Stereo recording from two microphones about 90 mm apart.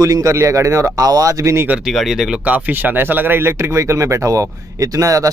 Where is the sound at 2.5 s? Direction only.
20° right (ahead or behind).